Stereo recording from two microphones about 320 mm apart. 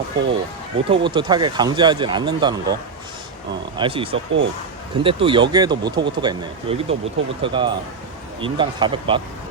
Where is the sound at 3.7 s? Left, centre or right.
Centre.